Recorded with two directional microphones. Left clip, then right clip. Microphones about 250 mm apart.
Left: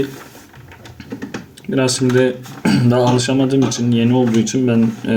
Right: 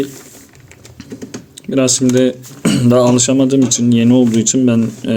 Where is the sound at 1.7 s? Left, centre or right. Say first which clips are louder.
Right 3 dB; right.